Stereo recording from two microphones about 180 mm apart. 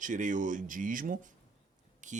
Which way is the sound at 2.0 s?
45° right (ahead or behind).